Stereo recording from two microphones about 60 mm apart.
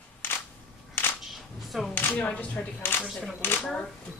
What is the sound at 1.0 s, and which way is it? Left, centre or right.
Single-lens reflex camera, left.